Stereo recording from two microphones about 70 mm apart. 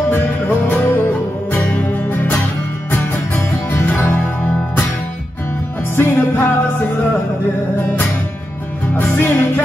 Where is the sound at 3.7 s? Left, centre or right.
Left.